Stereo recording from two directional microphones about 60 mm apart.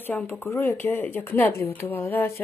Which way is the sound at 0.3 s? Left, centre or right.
Left.